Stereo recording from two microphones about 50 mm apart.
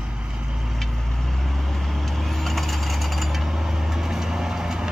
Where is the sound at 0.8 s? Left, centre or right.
Centre.